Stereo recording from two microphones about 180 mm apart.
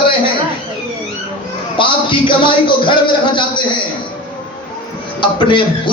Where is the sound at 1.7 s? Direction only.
25° left (ahead or behind).